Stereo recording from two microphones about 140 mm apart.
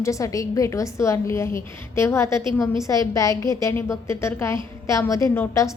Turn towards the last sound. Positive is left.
turn(degrees=20)  # may be behind; listen again after turning